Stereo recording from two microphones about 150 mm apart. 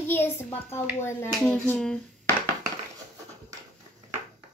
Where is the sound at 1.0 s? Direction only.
10° left (ahead or behind).